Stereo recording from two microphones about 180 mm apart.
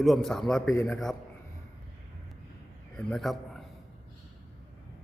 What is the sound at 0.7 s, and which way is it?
Speech, 15° left (ahead or behind).